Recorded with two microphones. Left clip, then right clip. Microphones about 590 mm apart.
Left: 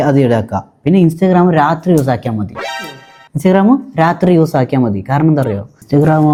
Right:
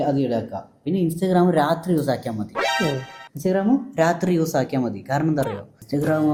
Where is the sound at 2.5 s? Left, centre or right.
Centre.